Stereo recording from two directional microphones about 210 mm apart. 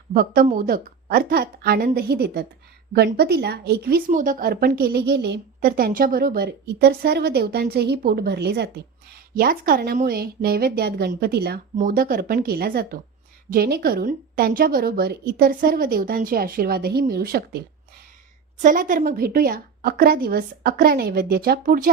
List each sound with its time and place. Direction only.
0.1 s a woman's voice: 40° right (ahead or behind)
18.6 s a woman's voice: 40° right (ahead or behind)